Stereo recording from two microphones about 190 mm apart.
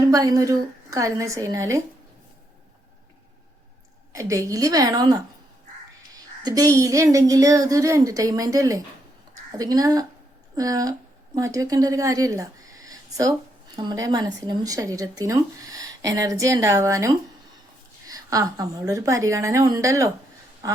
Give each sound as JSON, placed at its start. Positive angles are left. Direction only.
{"t": 0.1, "sound": "speech", "side_deg": -15}
{"t": 4.1, "sound": "speech", "side_deg": -15}
{"t": 6.1, "sound": "speech", "side_deg": -20}
{"t": 20.6, "sound": "a sound", "side_deg": -15}